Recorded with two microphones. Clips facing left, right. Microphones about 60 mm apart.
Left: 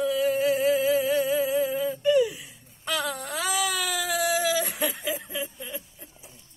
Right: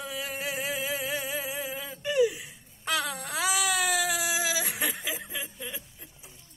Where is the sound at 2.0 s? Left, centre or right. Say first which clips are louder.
Left 3 dB; right.